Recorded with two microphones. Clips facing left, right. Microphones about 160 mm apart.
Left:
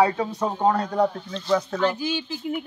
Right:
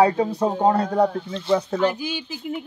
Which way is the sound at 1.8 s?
15° right (ahead or behind).